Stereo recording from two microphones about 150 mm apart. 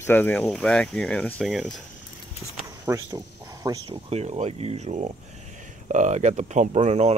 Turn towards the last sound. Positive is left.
turn(degrees=-45)  # may be behind; listen again after turning